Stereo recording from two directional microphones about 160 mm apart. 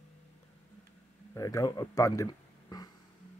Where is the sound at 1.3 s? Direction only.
20° left (ahead or behind).